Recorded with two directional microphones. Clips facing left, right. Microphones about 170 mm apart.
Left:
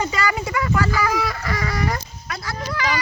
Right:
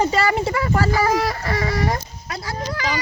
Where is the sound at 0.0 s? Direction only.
30° right (ahead or behind).